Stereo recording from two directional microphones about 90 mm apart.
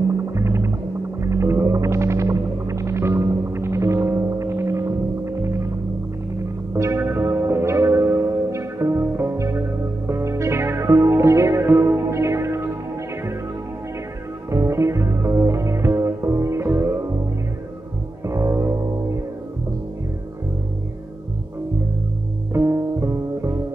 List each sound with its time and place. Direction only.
0.3 s music: 30° right (ahead or behind)
1.2 s whale vocalization: 30° right (ahead or behind)
6.7 s music: 30° right (ahead or behind)
14.5 s music: 30° right (ahead or behind)
18.2 s music: 35° right (ahead or behind)
22.5 s music: 30° right (ahead or behind)